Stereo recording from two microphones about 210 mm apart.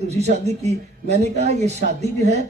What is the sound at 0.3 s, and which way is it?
Speech, 30° right (ahead or behind).